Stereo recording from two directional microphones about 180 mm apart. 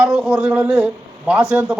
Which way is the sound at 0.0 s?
5° right (ahead or behind).